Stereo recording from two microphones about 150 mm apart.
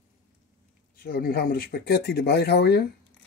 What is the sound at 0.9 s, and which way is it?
Speech, 85° left.